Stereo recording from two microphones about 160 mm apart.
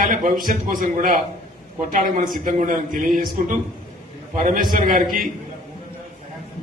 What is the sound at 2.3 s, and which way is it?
A man's voice, 60° right (ahead or behind).